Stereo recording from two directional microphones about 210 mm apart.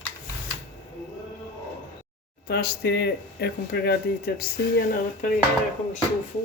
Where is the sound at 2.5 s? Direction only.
50° left (ahead or behind).